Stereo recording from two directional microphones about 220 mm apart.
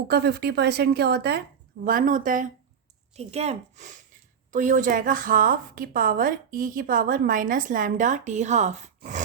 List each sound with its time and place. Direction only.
0.1 s a woman's voice: 45° right (ahead or behind); by 8.9 s 30° right (ahead or behind)